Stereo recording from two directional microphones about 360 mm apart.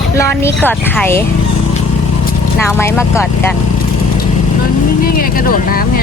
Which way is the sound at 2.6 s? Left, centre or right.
Centre.